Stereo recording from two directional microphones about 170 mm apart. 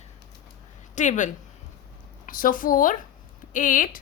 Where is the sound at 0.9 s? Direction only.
45° left (ahead or behind).